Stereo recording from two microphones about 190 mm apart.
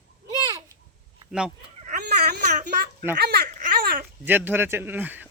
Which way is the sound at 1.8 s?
40° right (ahead or behind).